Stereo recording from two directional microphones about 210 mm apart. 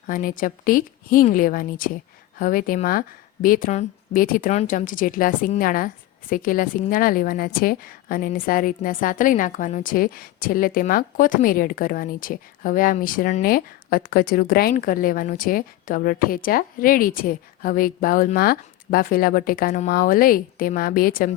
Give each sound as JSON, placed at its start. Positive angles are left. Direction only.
{"t": 0.1, "sound": "a woman's voice", "side_deg": 40}